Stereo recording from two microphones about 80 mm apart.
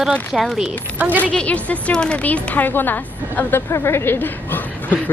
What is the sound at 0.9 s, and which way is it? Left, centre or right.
Speech, right.